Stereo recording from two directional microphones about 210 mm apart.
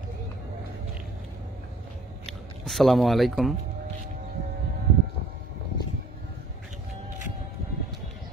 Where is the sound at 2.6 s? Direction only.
Centre (ahead or behind).